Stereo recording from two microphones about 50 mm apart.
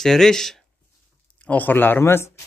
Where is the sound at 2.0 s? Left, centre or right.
Left.